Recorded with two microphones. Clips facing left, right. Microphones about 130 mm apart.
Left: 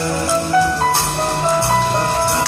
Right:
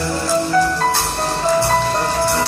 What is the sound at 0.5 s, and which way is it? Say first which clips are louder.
Music: left 3 dB; 15° left (ahead or behind).